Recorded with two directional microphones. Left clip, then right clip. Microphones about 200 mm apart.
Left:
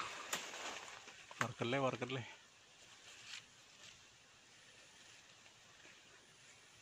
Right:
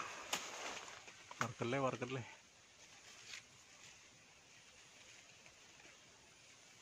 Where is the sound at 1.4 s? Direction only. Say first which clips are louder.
Left 1 dB; 10° left (ahead or behind).